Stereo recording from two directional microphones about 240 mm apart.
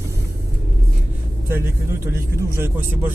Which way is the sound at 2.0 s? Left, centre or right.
Centre.